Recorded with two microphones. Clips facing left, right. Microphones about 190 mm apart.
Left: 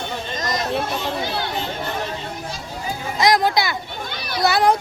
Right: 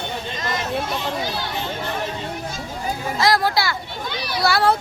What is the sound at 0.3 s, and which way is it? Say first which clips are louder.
Chatter: left 3 dB; 40° left (ahead or behind).